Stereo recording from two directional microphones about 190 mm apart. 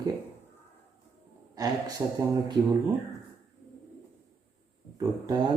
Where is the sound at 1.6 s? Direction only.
20° right (ahead or behind).